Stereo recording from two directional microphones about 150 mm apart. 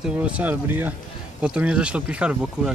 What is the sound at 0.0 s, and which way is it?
Speech, 10° right (ahead or behind).